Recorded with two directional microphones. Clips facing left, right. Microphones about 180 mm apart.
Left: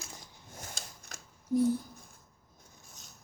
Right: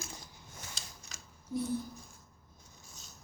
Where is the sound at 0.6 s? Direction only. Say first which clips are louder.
Left 4 dB; 50° left (ahead or behind).